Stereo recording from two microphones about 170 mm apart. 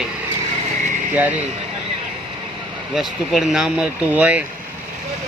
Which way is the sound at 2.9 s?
Centre (ahead or behind).